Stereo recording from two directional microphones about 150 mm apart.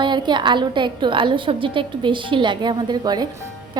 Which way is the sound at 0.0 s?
30° right (ahead or behind).